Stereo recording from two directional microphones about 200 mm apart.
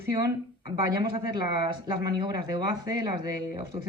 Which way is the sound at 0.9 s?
20° right (ahead or behind).